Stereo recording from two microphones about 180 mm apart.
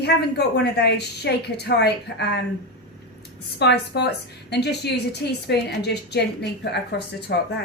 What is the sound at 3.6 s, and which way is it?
A woman's voice, 70° left (ahead or behind).